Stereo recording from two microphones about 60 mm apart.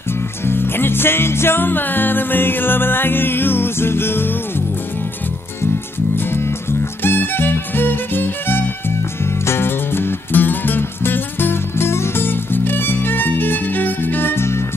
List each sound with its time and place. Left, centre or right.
0.5 s music: left
7.0 s music: left